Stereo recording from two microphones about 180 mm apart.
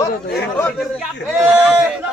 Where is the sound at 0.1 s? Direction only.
65° left (ahead or behind).